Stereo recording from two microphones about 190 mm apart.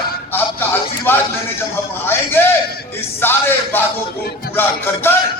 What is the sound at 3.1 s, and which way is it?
Speech, 10° left (ahead or behind).